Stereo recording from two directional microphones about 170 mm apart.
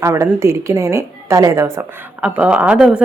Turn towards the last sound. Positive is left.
turn(degrees=-5)  # may be behind; listen again after turning